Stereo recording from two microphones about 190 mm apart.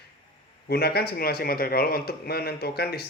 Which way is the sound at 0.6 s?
55° left (ahead or behind).